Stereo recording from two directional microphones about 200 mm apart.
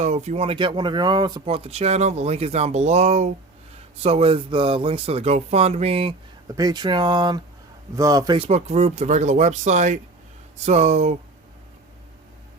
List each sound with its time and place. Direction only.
0.0 s speech: 35° right (ahead or behind)
8.4 s speech: 30° right (ahead or behind)